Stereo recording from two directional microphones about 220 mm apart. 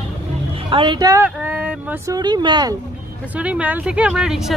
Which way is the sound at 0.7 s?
20° right (ahead or behind).